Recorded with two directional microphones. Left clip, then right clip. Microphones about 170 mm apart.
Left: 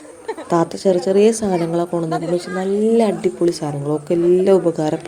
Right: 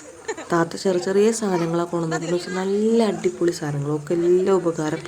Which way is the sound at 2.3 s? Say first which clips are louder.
Left 2 dB; 10° left (ahead or behind).